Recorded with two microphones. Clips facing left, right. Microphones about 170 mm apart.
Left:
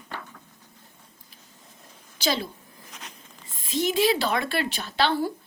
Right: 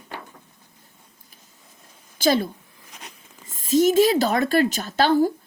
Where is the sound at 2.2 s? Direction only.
50° right (ahead or behind).